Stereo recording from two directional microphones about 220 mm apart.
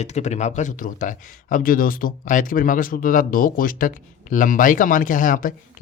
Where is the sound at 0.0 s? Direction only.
30° left (ahead or behind).